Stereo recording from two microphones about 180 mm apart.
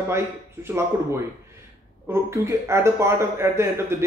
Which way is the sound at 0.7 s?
15° right (ahead or behind).